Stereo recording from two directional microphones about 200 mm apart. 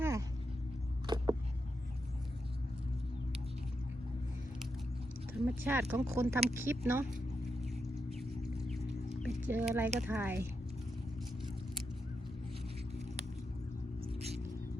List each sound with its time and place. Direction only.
0.0 s vehicle: 15° right (ahead or behind)
1.0 s a sound: 20° right (ahead or behind)
5.5 s speech: 10° right (ahead or behind)
7.6 s a sound: centre (ahead or behind)
9.5 s speech: 10° right (ahead or behind)
14.0 s music: 30° right (ahead or behind)